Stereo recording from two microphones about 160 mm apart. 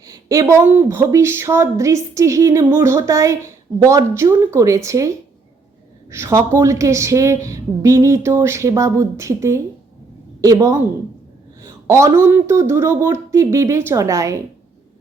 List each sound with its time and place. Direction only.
0.0 s a woman's voice: 20° right (ahead or behind)